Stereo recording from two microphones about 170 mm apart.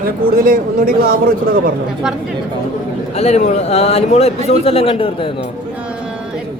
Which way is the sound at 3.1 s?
40° left (ahead or behind).